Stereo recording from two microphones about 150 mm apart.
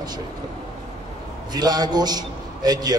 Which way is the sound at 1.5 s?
25° right (ahead or behind).